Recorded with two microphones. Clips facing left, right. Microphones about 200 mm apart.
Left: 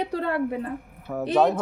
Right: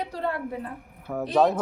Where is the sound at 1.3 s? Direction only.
Centre (ahead or behind).